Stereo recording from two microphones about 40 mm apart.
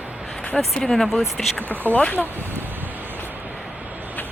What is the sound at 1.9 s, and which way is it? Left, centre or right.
Speech, left.